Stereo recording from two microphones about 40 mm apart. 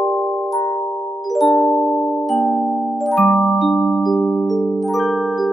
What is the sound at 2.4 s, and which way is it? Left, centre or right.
Music, left.